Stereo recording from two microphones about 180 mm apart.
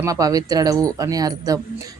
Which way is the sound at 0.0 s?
20° right (ahead or behind).